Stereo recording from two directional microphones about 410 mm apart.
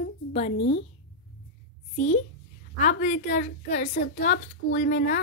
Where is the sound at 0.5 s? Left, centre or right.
Left.